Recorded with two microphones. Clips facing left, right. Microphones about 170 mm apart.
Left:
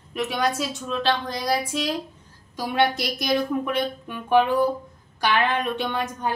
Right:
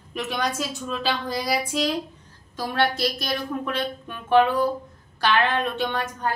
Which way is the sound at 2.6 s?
15° left (ahead or behind).